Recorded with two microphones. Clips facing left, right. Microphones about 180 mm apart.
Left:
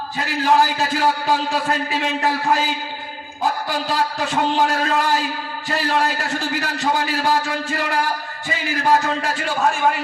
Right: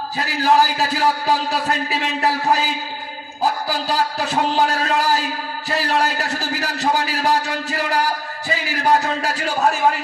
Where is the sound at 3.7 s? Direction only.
35° right (ahead or behind).